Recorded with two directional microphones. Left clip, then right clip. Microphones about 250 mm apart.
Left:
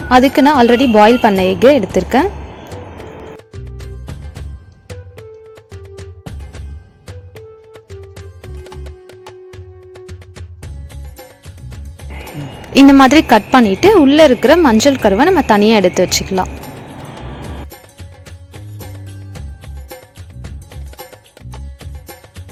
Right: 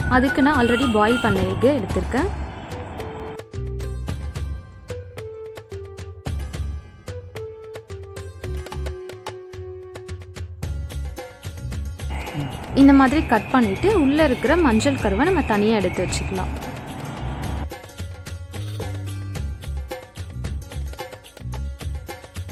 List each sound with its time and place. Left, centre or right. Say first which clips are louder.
0.1 s speech: left 9 dB; left
2.6 s music: left 1 dB; centre
12.7 s speech: left 8 dB; left
19.3 s music: even; centre